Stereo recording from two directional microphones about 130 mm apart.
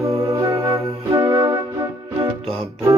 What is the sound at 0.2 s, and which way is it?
Music, 25° right (ahead or behind).